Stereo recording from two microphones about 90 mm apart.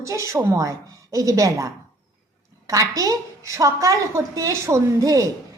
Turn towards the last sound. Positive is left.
turn(degrees=-35)  # may be behind; listen again after turning